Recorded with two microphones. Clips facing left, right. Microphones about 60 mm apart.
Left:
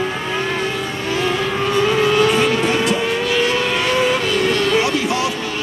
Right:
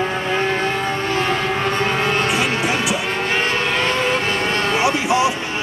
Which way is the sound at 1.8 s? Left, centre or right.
Right.